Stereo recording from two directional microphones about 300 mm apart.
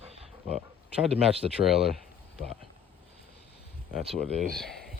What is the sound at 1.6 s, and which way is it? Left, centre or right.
Speech, centre.